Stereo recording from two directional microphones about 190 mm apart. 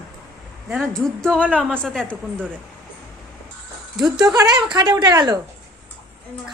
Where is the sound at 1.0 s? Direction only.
5° left (ahead or behind).